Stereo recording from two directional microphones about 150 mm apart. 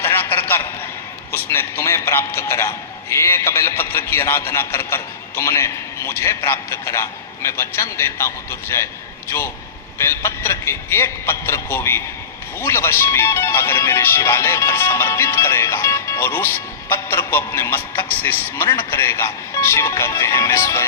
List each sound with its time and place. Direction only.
0.0 s a sound: 15° left (ahead or behind)
1.3 s speech: 15° left (ahead or behind)
10.0 s speech: 15° left (ahead or behind)